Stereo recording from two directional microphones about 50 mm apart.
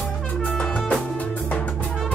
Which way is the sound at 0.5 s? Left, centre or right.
Centre.